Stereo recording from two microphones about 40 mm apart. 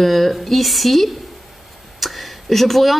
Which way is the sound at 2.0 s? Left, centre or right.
Centre.